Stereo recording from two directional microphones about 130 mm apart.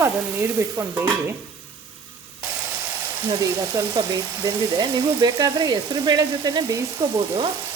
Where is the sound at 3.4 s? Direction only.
30° right (ahead or behind).